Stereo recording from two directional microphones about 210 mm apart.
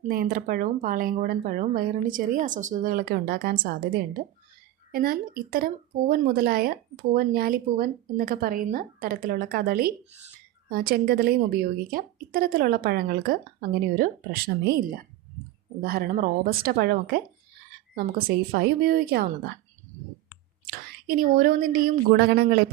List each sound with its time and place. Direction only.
0.0 s speech: 45° right (ahead or behind)
20.7 s speech: 45° right (ahead or behind)